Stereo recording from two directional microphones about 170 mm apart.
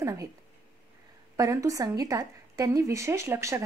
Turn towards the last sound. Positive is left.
turn(degrees=-15)  # may be behind; listen again after turning